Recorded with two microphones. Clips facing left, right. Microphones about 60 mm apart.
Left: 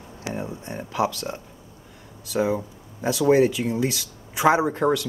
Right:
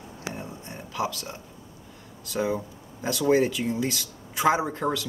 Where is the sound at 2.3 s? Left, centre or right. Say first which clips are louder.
Left 4 dB; centre.